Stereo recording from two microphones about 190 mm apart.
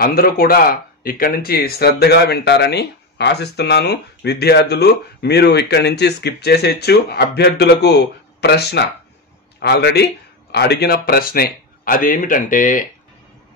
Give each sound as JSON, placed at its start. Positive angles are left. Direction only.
{"t": 0.0, "sound": "speech", "side_deg": 50}